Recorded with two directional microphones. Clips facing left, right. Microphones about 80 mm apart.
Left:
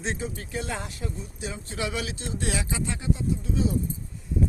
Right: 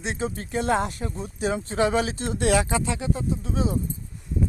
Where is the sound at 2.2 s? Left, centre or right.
Right.